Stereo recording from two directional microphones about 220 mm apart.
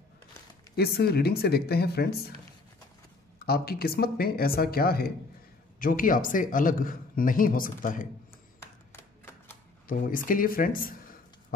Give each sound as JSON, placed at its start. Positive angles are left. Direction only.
{"t": 0.7, "sound": "speech", "side_deg": 45}
{"t": 3.4, "sound": "a man's voice", "side_deg": 45}
{"t": 8.9, "sound": "typewriter", "side_deg": 10}
{"t": 9.8, "sound": "a man's voice", "side_deg": 40}